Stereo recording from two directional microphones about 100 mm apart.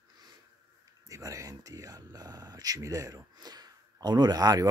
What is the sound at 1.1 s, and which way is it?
Speech, 35° right (ahead or behind).